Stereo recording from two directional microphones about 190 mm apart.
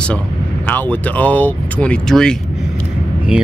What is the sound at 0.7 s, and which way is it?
Speech, 10° left (ahead or behind).